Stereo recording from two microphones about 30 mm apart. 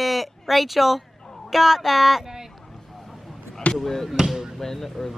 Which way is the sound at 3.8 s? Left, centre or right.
Centre.